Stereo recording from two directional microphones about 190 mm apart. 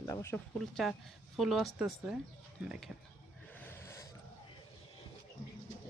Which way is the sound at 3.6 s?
10° left (ahead or behind).